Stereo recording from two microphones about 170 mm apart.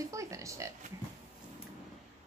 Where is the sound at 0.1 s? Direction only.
20° right (ahead or behind).